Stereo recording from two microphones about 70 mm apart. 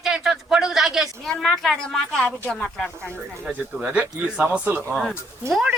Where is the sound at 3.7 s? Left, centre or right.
Centre.